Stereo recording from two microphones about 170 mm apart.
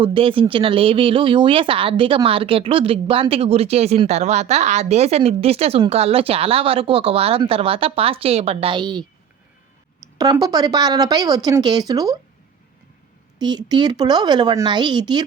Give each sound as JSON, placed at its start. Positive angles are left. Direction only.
{"t": 0.0, "sound": "speech", "side_deg": -30}
{"t": 10.2, "sound": "speech", "side_deg": -20}
{"t": 13.4, "sound": "speech", "side_deg": -25}